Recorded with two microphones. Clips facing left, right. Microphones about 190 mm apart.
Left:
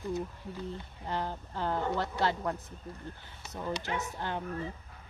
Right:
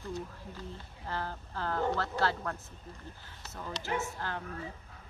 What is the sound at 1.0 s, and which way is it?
Speech, 20° left (ahead or behind).